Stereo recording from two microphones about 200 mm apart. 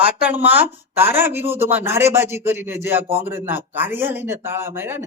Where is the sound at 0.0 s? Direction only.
5° right (ahead or behind).